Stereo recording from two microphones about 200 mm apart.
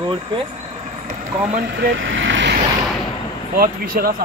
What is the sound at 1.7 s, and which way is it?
Speech, 55° right (ahead or behind).